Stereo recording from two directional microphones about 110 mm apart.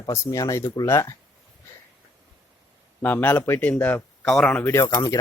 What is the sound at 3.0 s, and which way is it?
Speech, 15° left (ahead or behind).